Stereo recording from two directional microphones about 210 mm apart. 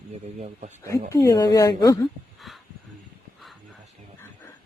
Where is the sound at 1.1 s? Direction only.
15° left (ahead or behind).